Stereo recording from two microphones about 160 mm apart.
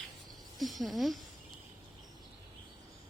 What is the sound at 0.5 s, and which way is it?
Speech, centre (ahead or behind).